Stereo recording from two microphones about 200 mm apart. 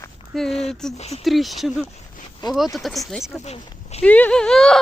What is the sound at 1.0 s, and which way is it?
Speech, 30° left (ahead or behind).